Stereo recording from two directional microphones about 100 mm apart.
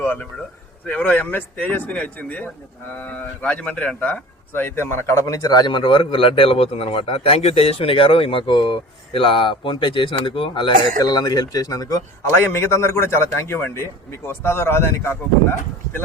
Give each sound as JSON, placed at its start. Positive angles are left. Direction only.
{"t": 0.0, "sound": "speech", "side_deg": 15}
{"t": 11.0, "sound": "speech", "side_deg": 40}
{"t": 12.5, "sound": "a man's voice", "side_deg": 25}